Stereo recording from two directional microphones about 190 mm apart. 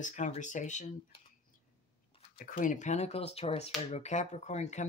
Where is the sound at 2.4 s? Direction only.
45° left (ahead or behind).